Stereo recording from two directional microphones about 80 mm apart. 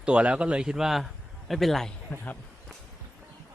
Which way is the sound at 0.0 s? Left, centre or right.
Centre.